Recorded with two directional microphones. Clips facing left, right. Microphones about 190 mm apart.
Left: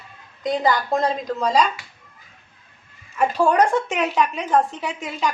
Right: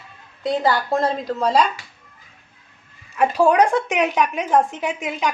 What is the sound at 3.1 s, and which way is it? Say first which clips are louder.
Speech: right 2 dB; 10° right (ahead or behind).